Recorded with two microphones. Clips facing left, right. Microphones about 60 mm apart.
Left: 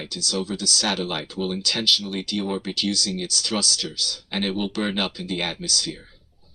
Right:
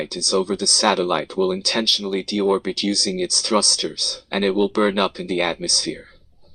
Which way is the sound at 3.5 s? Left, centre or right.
Right.